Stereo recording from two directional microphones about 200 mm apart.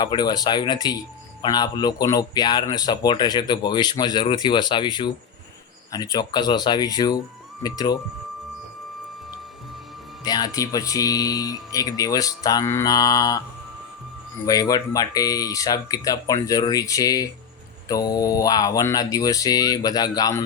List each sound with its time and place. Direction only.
0.0 s speech: 20° left (ahead or behind)
10.2 s speech: 20° left (ahead or behind)
14.4 s speech: 20° left (ahead or behind)